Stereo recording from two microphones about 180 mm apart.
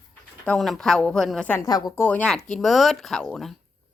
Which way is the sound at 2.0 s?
5° left (ahead or behind).